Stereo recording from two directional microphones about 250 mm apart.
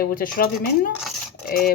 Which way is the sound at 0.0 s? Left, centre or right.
Left.